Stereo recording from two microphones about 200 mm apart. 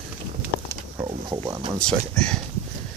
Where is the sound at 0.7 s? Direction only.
20° right (ahead or behind).